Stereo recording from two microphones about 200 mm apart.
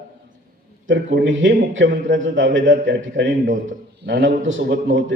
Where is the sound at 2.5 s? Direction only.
65° right (ahead or behind).